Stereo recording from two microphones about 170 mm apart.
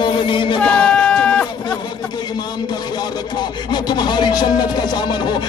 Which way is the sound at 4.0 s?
25° left (ahead or behind).